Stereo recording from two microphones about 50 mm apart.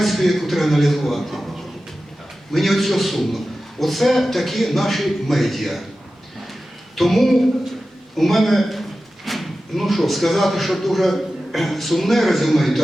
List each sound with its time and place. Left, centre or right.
0.0 s a man's voice: centre
2.5 s a man's voice: centre
6.9 s a man's voice: centre